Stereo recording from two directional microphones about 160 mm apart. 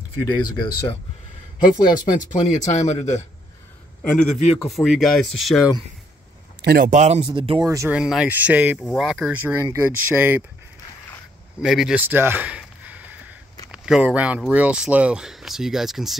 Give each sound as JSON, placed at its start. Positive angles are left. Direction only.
{"t": 0.2, "sound": "speech", "side_deg": 25}
{"t": 1.6, "sound": "speech", "side_deg": 60}
{"t": 2.1, "sound": "speech", "side_deg": 45}
{"t": 4.0, "sound": "a man's voice", "side_deg": 5}
{"t": 4.3, "sound": "speech", "side_deg": 45}
{"t": 4.6, "sound": "speech", "side_deg": 0}
{"t": 6.6, "sound": "speech", "side_deg": -75}
{"t": 6.9, "sound": "speech", "side_deg": -45}
{"t": 7.6, "sound": "speech", "side_deg": -20}
{"t": 7.9, "sound": "speech", "side_deg": -5}
{"t": 9.5, "sound": "speech", "side_deg": -15}
{"t": 11.6, "sound": "a sound", "side_deg": -5}
{"t": 13.7, "sound": "speech", "side_deg": -5}